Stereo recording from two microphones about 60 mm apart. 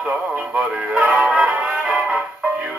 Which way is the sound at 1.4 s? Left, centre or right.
Right.